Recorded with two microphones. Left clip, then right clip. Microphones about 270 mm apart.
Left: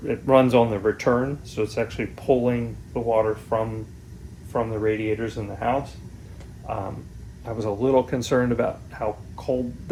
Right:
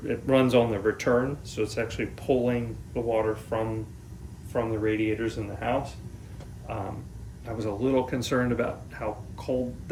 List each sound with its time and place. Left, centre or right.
0.0 s speech: centre